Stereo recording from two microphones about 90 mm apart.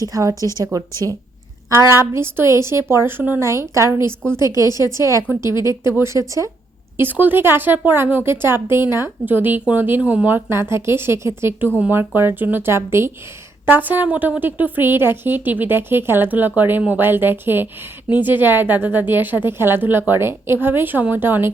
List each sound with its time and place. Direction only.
0.1 s speech: 35° right (ahead or behind)
0.3 s a woman's voice: 35° left (ahead or behind)
0.6 s speech: 40° right (ahead or behind); by 3.4 s 20° right (ahead or behind)
3.4 s speech: 35° right (ahead or behind)
4.6 s a woman's voice: 45° left (ahead or behind)
6.0 s speech: 35° right (ahead or behind)
6.9 s speech: 20° right (ahead or behind)